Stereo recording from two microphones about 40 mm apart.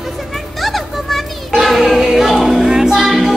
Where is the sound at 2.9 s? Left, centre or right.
Centre.